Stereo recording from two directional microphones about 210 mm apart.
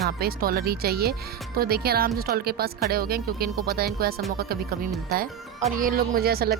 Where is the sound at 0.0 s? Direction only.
45° right (ahead or behind).